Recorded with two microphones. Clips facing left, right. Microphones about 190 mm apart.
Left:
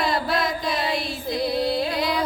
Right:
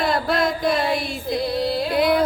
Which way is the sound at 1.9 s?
55° right (ahead or behind).